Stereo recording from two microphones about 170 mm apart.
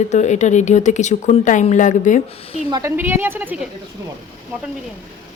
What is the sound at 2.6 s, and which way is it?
Speech, 25° right (ahead or behind).